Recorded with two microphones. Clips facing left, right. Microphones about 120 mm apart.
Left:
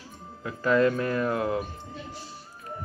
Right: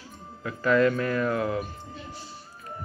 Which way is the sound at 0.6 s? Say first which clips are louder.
Even; 35° left (ahead or behind).